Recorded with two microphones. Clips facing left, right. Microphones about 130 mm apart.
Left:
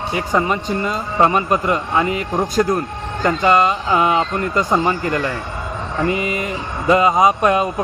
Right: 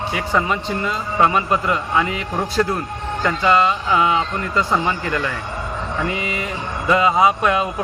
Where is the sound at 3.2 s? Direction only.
45° left (ahead or behind).